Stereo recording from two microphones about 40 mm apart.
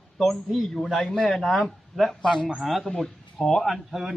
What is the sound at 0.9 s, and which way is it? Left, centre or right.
Speech, left.